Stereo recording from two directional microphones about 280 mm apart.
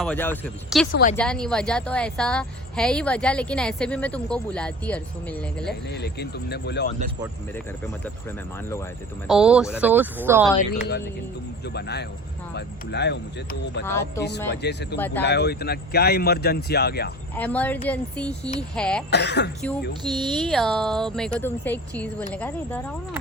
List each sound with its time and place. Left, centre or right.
0.0 s a woman's voice: centre
5.9 s speech: left
9.2 s a woman's voice: centre
10.6 s speech: left
14.9 s speech: centre
15.2 s speech: left
17.3 s a woman's voice: centre
19.1 s speech: left
20.3 s a woman's voice: centre